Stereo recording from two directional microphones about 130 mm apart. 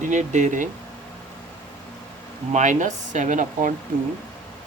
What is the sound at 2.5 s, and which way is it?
Speech, 75° right (ahead or behind).